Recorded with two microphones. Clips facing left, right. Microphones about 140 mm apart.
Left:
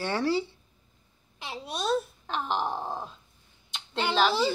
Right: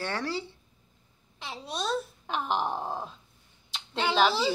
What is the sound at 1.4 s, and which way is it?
A child's voice, 5° left (ahead or behind).